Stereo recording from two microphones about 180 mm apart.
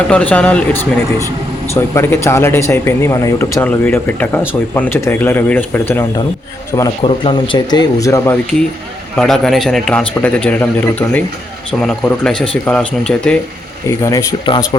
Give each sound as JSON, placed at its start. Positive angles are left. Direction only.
{"t": 0.1, "sound": "speech", "side_deg": 5}
{"t": 7.0, "sound": "speech", "side_deg": 30}
{"t": 9.1, "sound": "a man's voice", "side_deg": 0}
{"t": 13.8, "sound": "speech", "side_deg": 15}